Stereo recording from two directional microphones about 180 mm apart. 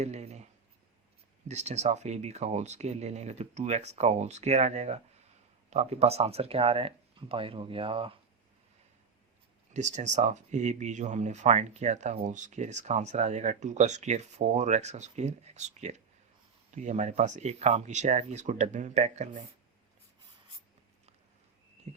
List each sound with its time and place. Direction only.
0.0 s a sound: 40° right (ahead or behind)
1.5 s speech: 40° right (ahead or behind)
9.7 s speech: 40° right (ahead or behind)
21.9 s heart sounds: 40° right (ahead or behind)